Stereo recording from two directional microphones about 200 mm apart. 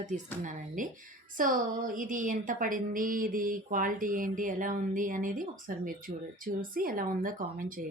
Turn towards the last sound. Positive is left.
turn(degrees=-45)  # may be behind; listen again after turning